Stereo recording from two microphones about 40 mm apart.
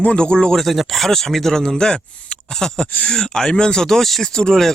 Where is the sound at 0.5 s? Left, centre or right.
Centre.